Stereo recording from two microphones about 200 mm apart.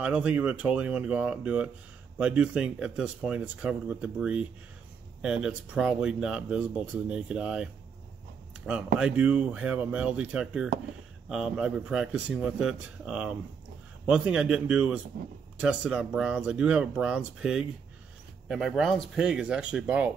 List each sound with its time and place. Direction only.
0.0 s speech: 5° right (ahead or behind)